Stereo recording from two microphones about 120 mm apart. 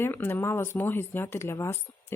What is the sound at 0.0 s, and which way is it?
Speech, 20° left (ahead or behind).